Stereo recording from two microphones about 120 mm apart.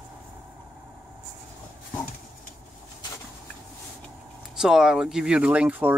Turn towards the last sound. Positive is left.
turn(degrees=-10)  # may be behind; listen again after turning